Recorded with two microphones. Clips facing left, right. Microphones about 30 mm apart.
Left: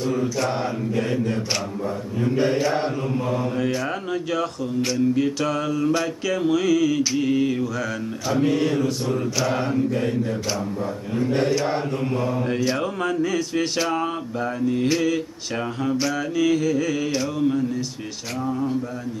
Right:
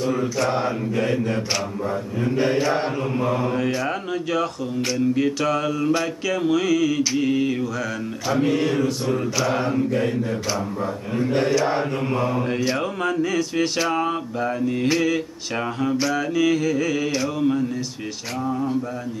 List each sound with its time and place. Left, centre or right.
0.0 s speech: centre
3.2 s mantra: centre
3.5 s speech: centre
7.2 s mantra: centre
11.3 s speech: centre
12.0 s mantra: centre